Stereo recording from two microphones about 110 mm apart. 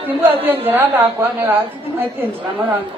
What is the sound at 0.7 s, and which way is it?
A man's voice, 20° right (ahead or behind).